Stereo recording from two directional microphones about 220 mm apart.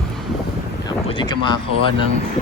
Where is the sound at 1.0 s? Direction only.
20° left (ahead or behind).